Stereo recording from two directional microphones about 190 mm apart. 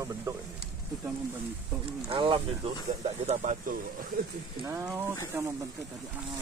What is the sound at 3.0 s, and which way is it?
Speech, 40° right (ahead or behind).